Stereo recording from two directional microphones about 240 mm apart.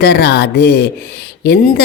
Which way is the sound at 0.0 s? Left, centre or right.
Left.